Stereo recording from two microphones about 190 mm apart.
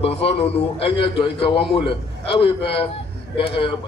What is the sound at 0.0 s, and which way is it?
A man's voice, 30° left (ahead or behind).